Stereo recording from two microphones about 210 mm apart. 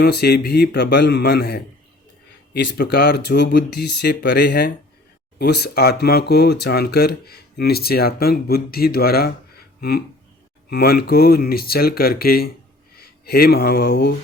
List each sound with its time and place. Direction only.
0.0 s speech: 50° left (ahead or behind)
10.7 s speech: 50° left (ahead or behind)